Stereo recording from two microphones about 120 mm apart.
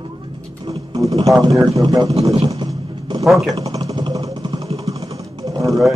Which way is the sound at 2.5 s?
40° right (ahead or behind).